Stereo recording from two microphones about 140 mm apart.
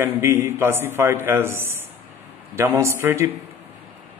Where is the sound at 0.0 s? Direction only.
20° right (ahead or behind).